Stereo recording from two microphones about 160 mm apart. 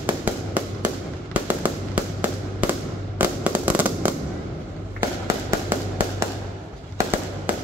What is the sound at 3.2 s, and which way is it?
Fireworks, 10° right (ahead or behind).